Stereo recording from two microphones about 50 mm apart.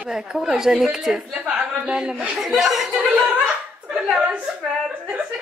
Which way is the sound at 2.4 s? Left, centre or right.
Centre.